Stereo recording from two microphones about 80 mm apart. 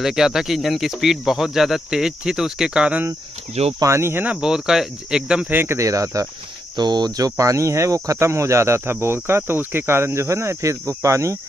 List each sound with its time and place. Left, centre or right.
0.0 s speech: centre
3.8 s speech: right
4.4 s speech: centre
5.5 s speech: right
5.8 s speech: right
6.8 s speech: right